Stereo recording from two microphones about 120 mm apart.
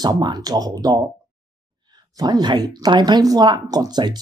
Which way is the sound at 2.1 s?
35° right (ahead or behind).